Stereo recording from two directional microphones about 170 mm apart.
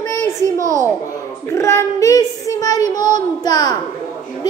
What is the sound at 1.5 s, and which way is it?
Child singing, 15° left (ahead or behind).